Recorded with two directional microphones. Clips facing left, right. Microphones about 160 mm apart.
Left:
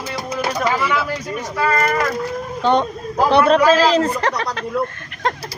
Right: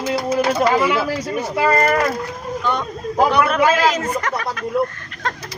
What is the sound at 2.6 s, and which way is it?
Speech, 30° left (ahead or behind).